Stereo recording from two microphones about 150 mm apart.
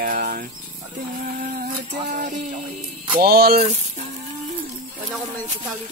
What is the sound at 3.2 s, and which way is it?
Speech, 90° right.